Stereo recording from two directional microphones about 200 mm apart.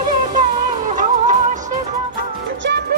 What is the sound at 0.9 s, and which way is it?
Music, 40° right (ahead or behind).